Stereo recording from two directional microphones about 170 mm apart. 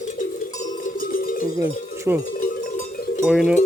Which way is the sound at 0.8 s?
55° left (ahead or behind).